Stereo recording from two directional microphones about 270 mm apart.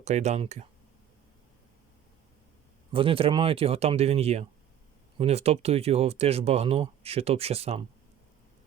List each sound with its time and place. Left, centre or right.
0.0 s speech: right
2.9 s speech: centre